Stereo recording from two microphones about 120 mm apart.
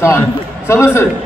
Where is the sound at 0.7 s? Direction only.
25° left (ahead or behind).